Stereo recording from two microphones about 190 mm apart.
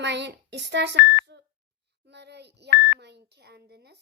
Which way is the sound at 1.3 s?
60° right (ahead or behind).